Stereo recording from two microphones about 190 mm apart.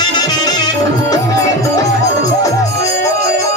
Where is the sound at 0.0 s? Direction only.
20° left (ahead or behind).